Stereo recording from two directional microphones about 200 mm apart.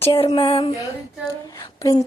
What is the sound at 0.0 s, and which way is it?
Speech, 25° left (ahead or behind).